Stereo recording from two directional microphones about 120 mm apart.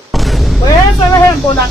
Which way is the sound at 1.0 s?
20° left (ahead or behind).